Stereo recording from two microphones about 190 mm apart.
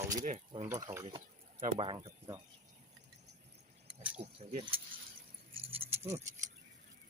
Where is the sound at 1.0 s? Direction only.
30° right (ahead or behind).